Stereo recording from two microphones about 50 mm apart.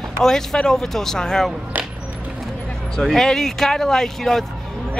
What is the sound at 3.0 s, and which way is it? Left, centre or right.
Speech, centre.